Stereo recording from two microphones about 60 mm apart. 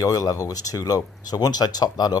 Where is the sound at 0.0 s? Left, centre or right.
Left.